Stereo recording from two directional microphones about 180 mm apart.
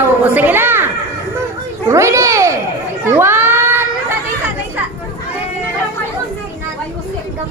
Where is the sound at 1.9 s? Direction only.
15° right (ahead or behind).